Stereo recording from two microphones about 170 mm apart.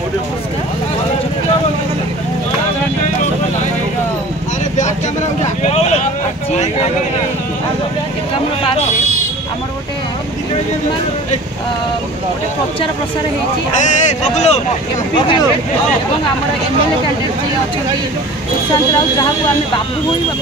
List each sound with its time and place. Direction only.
5.6 s vehicle: 40° left (ahead or behind)
13.7 s speech: 45° left (ahead or behind)
15.1 s speech: 25° left (ahead or behind)